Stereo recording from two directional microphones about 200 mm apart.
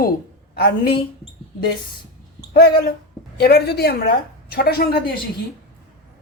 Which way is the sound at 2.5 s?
50° left (ahead or behind).